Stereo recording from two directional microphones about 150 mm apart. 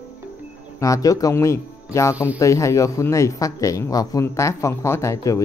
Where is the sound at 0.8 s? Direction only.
20° left (ahead or behind).